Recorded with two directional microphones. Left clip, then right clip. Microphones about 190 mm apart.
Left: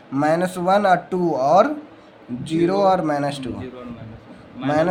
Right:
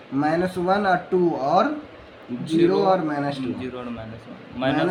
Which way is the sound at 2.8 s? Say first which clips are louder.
Left 3 dB; 35° left (ahead or behind).